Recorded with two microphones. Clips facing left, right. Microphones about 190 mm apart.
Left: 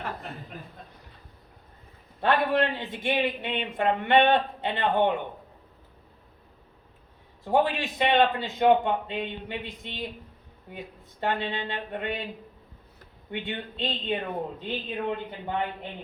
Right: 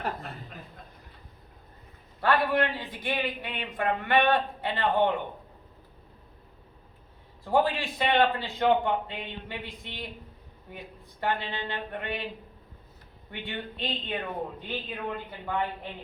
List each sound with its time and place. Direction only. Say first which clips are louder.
2.2 s speech: left 1 dB; 25° left (ahead or behind)
7.4 s speech: left 1 dB; 20° left (ahead or behind)
11.2 s speech: left 2 dB; 20° left (ahead or behind)
13.4 s speech: left 1 dB; 25° left (ahead or behind)